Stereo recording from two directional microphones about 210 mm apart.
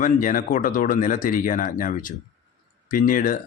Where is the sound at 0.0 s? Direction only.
40° left (ahead or behind).